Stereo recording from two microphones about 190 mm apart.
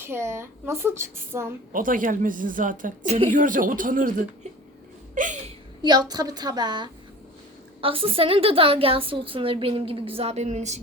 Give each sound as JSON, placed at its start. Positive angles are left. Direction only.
{"t": 0.0, "sound": "a woman's voice", "side_deg": -15}
{"t": 1.7, "sound": "a woman's voice", "side_deg": -45}
{"t": 5.1, "sound": "a woman's voice", "side_deg": -45}
{"t": 5.8, "sound": "a woman's voice", "side_deg": -20}